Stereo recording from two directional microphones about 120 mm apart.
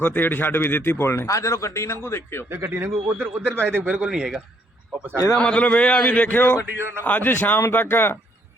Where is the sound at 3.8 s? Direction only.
10° right (ahead or behind).